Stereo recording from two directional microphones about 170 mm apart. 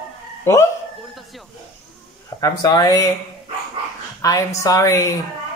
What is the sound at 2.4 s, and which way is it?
Speech, 20° left (ahead or behind).